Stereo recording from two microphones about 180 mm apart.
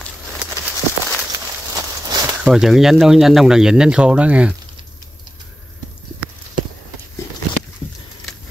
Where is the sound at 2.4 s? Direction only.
Centre (ahead or behind).